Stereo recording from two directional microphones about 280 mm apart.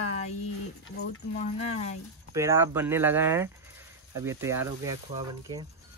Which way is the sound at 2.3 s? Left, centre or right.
Centre.